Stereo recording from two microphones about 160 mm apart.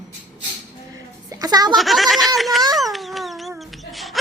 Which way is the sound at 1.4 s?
25° right (ahead or behind).